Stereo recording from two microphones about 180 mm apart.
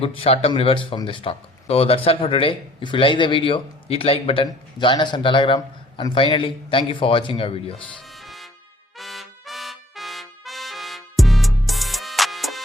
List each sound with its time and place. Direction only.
0.0 s a man's voice: 35° left (ahead or behind)
7.9 s music: centre (ahead or behind)
9.0 s trumpet: centre (ahead or behind)